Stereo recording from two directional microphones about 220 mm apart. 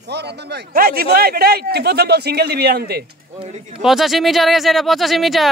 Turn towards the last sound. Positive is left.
turn(degrees=0)  # may be behind; listen again after turning